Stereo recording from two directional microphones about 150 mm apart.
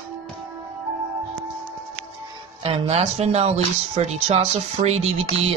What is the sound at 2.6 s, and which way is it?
Speech, 45° right (ahead or behind).